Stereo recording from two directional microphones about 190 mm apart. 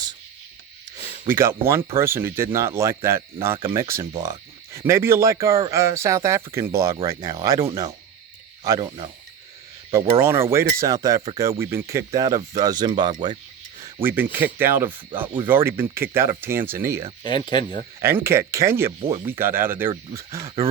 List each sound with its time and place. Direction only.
1.3 s speech: 10° right (ahead or behind)
10.2 s speech: 15° right (ahead or behind)
14.0 s speech: 10° right (ahead or behind)
17.2 s speech: 25° left (ahead or behind)
18.0 s speech: 15° right (ahead or behind)
18.9 s speech: 30° right (ahead or behind)
19.2 s speech: 10° right (ahead or behind)